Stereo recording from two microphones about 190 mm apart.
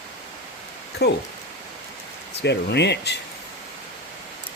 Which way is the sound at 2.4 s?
65° left (ahead or behind).